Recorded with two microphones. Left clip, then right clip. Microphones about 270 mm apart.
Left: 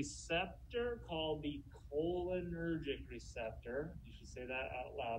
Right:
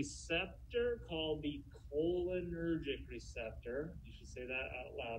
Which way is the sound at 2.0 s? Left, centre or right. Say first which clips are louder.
Right 2 dB; centre.